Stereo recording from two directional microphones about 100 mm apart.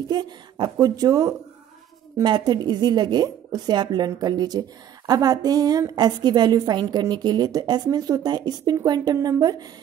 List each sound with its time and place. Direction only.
0.1 s a woman's voice: 45° right (ahead or behind)